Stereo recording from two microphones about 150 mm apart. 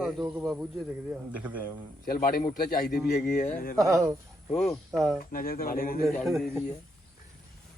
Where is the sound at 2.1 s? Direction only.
75° left (ahead or behind).